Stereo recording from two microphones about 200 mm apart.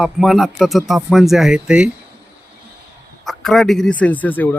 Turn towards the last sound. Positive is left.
turn(degrees=10)  # may be behind; listen again after turning